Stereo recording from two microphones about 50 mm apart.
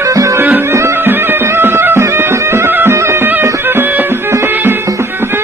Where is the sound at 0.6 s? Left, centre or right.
Right.